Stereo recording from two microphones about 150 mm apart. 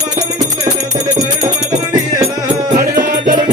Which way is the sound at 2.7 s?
65° right (ahead or behind).